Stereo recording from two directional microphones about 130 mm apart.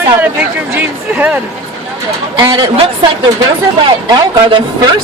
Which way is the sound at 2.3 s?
40° right (ahead or behind).